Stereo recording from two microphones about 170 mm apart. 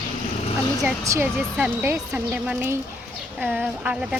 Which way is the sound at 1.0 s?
15° right (ahead or behind).